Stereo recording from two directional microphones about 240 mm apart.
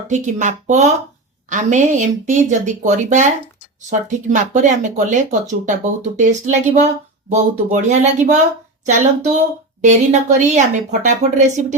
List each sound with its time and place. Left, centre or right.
0.1 s speech: right